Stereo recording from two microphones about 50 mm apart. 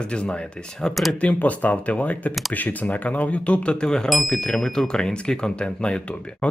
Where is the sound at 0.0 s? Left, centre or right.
Left.